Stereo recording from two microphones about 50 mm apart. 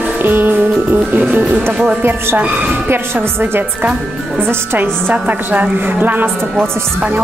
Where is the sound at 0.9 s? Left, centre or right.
Right.